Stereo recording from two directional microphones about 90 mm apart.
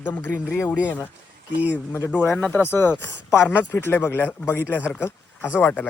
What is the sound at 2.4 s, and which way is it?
Speech, 20° left (ahead or behind).